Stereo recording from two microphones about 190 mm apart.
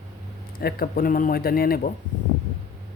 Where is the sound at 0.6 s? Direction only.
50° left (ahead or behind).